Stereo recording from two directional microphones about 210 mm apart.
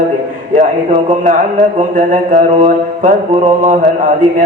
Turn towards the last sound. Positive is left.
turn(degrees=-40)  # may be behind; listen again after turning